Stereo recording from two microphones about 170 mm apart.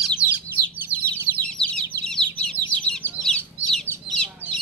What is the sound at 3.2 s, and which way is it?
Chicken, 5° left (ahead or behind).